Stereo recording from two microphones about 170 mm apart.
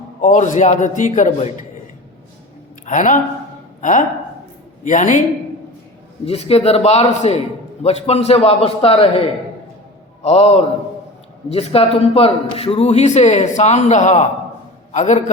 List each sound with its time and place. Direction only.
0.2 s a man's voice: 45° left (ahead or behind)
2.8 s a man's voice: 50° left (ahead or behind)
6.2 s a man's voice: 35° left (ahead or behind)
10.2 s a man's voice: 35° left (ahead or behind)